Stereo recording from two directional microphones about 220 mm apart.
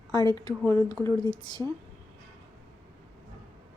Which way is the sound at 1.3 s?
20° left (ahead or behind).